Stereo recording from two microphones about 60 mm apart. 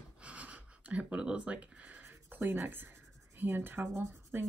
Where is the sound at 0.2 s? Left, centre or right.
Right.